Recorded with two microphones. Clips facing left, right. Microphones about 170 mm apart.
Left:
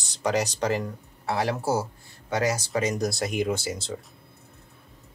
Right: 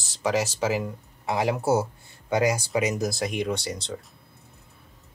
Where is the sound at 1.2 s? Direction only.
15° right (ahead or behind); by 4.0 s 5° left (ahead or behind).